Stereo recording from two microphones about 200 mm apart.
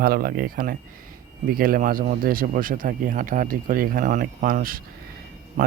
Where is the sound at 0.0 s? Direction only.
45° right (ahead or behind).